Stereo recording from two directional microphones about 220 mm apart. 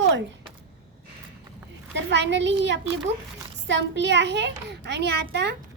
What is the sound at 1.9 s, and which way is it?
A child's voice, 50° right (ahead or behind).